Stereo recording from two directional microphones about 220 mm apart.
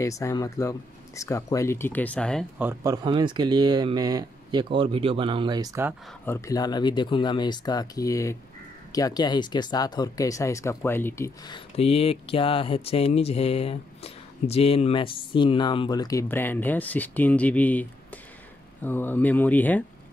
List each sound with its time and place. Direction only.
0.0 s speech: 15° left (ahead or behind)
2.6 s speech: 15° right (ahead or behind)
6.2 s speech: 10° left (ahead or behind)